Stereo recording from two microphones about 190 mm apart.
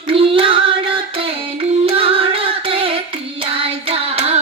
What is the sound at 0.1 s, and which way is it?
Music, 30° right (ahead or behind).